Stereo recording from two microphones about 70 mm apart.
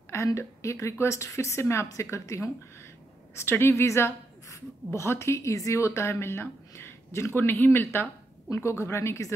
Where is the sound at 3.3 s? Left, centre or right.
Left.